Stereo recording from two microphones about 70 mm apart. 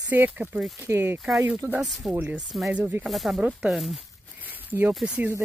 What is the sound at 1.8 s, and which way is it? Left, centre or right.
Speech, centre.